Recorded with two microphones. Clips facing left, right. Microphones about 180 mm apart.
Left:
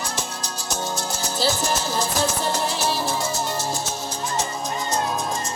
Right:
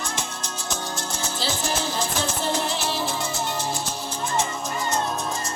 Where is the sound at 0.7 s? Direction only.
40° left (ahead or behind).